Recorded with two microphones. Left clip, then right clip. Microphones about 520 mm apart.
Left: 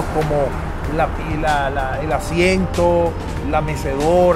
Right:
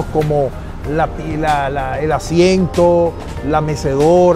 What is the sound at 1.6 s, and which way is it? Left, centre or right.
Speech, right.